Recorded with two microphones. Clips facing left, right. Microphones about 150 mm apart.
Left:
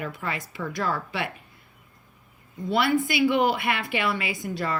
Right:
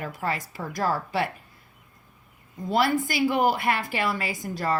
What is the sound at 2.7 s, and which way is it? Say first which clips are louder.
Speech: even; 45° right (ahead or behind).